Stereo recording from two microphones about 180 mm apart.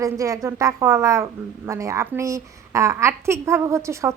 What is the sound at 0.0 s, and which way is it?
A woman's voice, 15° right (ahead or behind).